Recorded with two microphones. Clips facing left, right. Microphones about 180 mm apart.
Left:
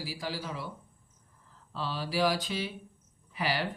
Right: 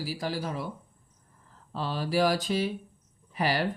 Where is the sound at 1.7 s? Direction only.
50° right (ahead or behind).